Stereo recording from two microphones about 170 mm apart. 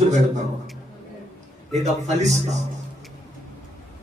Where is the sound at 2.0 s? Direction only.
40° right (ahead or behind).